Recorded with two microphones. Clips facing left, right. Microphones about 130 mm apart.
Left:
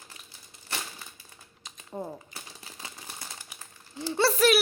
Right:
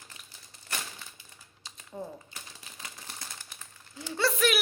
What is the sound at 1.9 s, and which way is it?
Speech, 40° left (ahead or behind).